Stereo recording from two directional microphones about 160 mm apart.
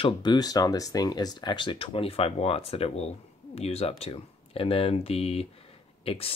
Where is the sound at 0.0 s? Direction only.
25° left (ahead or behind).